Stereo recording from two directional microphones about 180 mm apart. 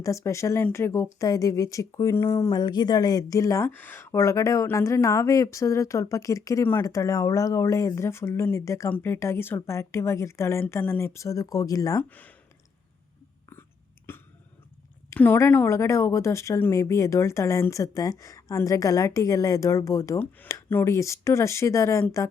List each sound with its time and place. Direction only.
0.0 s speech: 15° left (ahead or behind)
12.0 s speech: 10° left (ahead or behind)
14.1 s a sound: 15° left (ahead or behind)
15.1 s speech: 10° left (ahead or behind)